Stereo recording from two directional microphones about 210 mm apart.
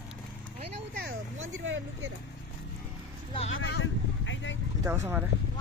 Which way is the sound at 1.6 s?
65° right (ahead or behind).